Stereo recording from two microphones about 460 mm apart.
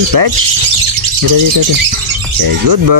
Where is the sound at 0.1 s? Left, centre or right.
Right.